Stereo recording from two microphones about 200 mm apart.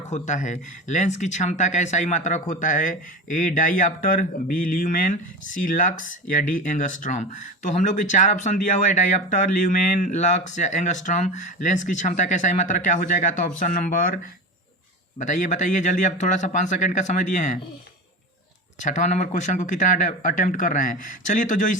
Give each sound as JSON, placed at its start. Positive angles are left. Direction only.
{"t": 0.1, "sound": "speech", "side_deg": 35}
{"t": 15.2, "sound": "speech", "side_deg": 40}
{"t": 18.9, "sound": "speech", "side_deg": 35}